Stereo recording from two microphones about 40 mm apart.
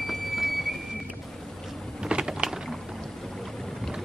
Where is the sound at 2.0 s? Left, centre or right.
Centre.